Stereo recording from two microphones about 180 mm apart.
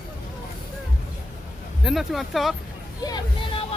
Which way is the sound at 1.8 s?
Centre (ahead or behind).